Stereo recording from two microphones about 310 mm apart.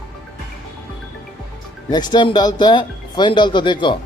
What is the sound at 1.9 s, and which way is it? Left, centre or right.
Speech, centre.